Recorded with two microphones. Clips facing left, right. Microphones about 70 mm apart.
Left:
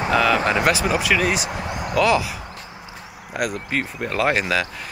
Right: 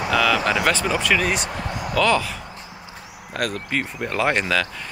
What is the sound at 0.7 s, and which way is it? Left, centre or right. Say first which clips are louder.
Speech: left 1 dB; centre.